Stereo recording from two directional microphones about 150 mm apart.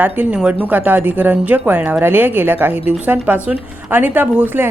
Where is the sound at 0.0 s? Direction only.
10° right (ahead or behind).